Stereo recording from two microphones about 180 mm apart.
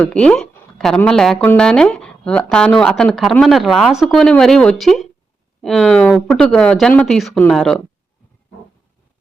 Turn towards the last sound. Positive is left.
turn(degrees=0)  # may be behind; listen again after turning